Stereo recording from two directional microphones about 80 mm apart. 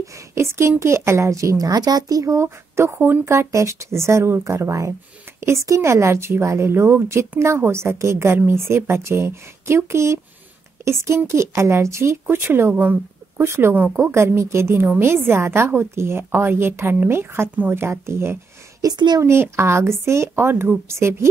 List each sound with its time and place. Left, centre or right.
0.0 s speech: right
2.3 s speech: right
18.9 s speech: right
19.2 s speech: right